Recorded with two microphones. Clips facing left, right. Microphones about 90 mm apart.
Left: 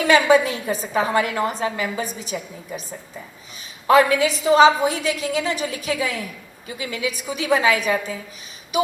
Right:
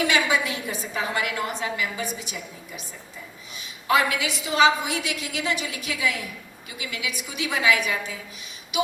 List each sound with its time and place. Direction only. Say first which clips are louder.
0.0 s a woman's voice: left 7 dB; 35° left (ahead or behind)